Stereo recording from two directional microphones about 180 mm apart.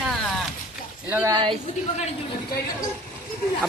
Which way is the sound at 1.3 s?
25° right (ahead or behind).